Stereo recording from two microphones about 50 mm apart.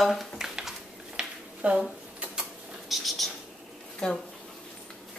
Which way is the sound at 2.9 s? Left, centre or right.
Centre.